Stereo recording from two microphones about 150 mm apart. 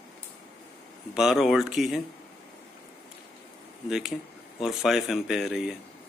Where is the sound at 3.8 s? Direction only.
Centre (ahead or behind).